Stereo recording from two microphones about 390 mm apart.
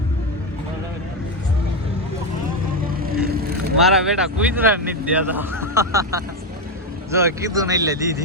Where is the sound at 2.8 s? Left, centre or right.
Right.